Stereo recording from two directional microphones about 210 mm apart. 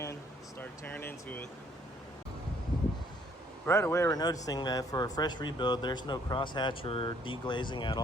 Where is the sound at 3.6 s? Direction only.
10° left (ahead or behind).